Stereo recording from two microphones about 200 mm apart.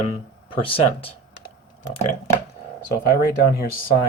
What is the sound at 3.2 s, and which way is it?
Speech, 50° left (ahead or behind).